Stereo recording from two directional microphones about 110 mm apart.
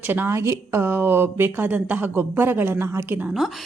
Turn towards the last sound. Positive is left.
turn(degrees=0)  # may be behind; listen again after turning